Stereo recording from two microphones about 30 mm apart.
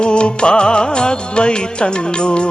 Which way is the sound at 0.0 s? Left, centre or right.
Left.